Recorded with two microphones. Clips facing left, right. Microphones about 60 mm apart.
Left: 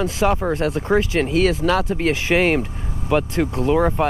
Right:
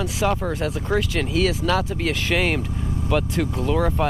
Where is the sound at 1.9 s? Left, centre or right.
Centre.